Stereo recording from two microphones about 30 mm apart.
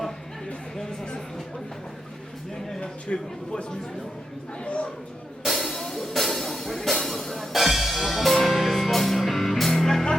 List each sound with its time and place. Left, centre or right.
0.8 s vehicle: left
2.8 s speech: left
4.6 s a sound: left
5.4 s music: centre
7.5 s music: centre